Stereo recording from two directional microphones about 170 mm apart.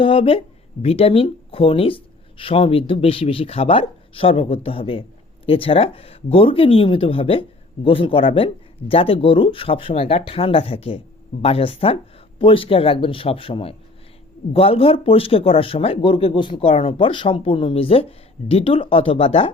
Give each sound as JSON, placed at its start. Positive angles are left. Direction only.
{"t": 0.0, "sound": "speech", "side_deg": 30}